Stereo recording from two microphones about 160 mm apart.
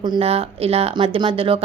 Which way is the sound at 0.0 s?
35° right (ahead or behind).